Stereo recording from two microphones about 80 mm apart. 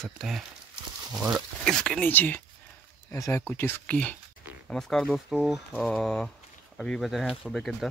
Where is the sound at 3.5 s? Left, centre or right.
Left.